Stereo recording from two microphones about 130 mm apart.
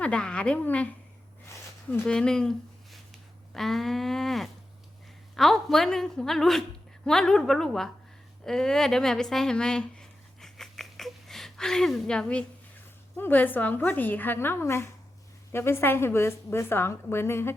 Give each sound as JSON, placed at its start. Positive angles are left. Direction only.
{"t": 0.0, "sound": "a woman's voice", "side_deg": 10}
{"t": 8.4, "sound": "a sound", "side_deg": 5}
{"t": 13.1, "sound": "a woman's voice", "side_deg": 15}